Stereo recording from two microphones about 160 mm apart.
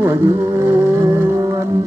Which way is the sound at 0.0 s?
15° right (ahead or behind).